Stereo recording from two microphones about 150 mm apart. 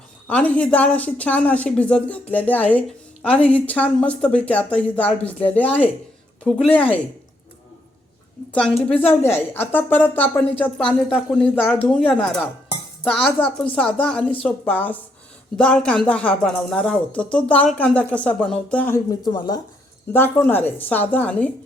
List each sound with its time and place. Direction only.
0.3 s a woman's voice: 10° left (ahead or behind)
9.2 s a woman's voice: 15° left (ahead or behind)
18.9 s speech: 25° left (ahead or behind)
20.1 s a woman's voice: 15° left (ahead or behind)